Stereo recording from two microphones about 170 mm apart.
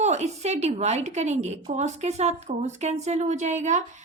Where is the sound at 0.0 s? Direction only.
40° right (ahead or behind).